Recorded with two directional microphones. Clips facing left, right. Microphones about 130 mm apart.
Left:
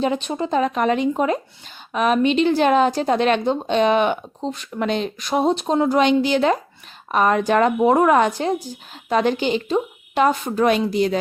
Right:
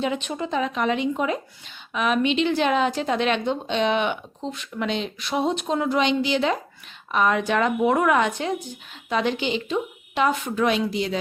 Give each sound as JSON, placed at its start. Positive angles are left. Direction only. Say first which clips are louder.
{"t": 0.0, "sound": "a woman's voice", "louder": "left 4 dB", "side_deg": 35}
{"t": 6.0, "sound": "a woman's voice", "louder": "left 4 dB", "side_deg": 50}